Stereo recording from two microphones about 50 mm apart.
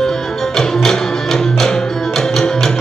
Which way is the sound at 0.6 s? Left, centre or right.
Centre.